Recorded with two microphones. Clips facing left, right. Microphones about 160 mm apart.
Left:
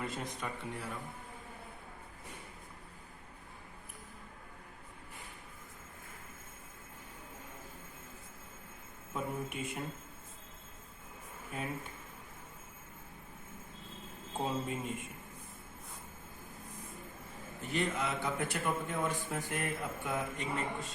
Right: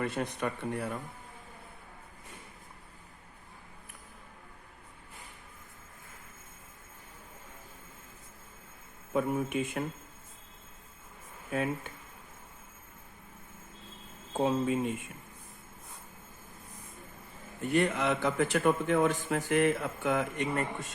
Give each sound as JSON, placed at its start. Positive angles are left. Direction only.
{"t": 0.0, "sound": "speech", "side_deg": -65}
{"t": 9.1, "sound": "a man's voice", "side_deg": -80}
{"t": 11.5, "sound": "speech", "side_deg": -85}
{"t": 14.3, "sound": "speech", "side_deg": -85}
{"t": 17.6, "sound": "a man's voice", "side_deg": -60}